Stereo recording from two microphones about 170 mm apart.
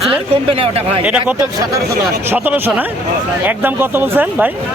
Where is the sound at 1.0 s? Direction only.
10° right (ahead or behind).